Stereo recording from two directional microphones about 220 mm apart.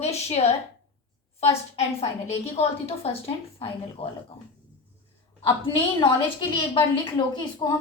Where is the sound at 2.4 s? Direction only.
25° left (ahead or behind).